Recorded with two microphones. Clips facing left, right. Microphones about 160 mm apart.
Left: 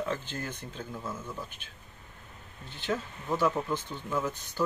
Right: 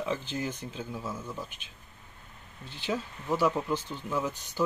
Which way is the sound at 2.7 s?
10° right (ahead or behind).